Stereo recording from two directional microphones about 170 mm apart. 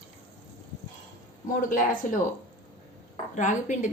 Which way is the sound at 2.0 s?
50° left (ahead or behind).